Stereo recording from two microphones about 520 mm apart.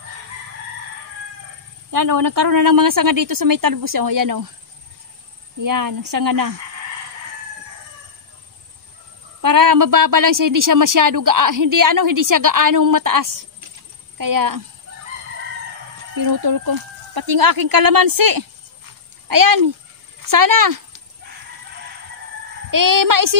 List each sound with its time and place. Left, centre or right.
1.9 s a woman's voice: right
5.6 s a woman's voice: right
9.4 s a woman's voice: right
16.2 s a woman's voice: right
22.7 s a woman's voice: right